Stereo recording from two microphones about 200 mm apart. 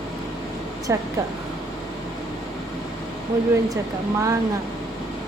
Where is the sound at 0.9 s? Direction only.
15° right (ahead or behind).